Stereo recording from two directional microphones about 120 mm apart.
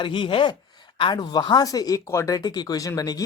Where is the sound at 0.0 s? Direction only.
45° left (ahead or behind).